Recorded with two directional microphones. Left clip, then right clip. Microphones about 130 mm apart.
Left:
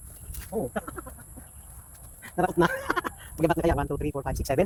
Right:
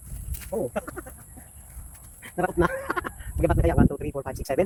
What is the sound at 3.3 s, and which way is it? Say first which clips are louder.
Speech: right 1 dB; 50° left (ahead or behind).